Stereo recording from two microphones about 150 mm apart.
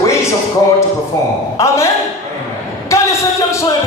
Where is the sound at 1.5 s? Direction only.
20° left (ahead or behind).